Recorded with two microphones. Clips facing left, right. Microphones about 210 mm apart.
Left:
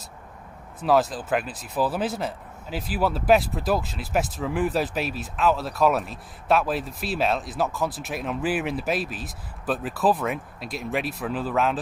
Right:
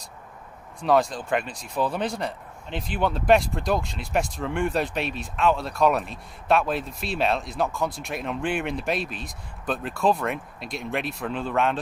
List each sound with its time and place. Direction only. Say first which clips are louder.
0.7 s speech: even; 5° left (ahead or behind)